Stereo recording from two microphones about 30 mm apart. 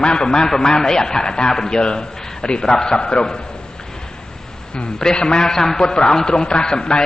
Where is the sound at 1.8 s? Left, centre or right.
Left.